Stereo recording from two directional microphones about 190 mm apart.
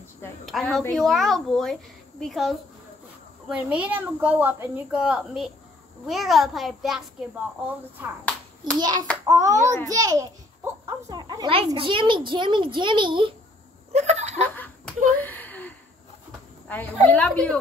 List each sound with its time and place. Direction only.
0.5 s a woman's voice: centre (ahead or behind)
8.7 s a child's voice: 20° right (ahead or behind)
13.9 s snicker: 35° right (ahead or behind)
14.4 s laughter: 10° left (ahead or behind)
15.1 s gasp: 10° left (ahead or behind)
16.6 s a woman's voice: 10° left (ahead or behind)